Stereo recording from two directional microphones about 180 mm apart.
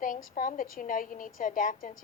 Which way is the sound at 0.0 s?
50° left (ahead or behind).